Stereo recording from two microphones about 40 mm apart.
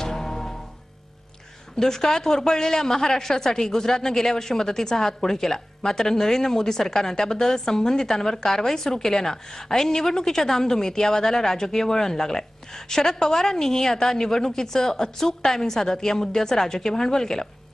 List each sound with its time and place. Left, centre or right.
0.0 s music: centre
1.8 s a woman's voice: centre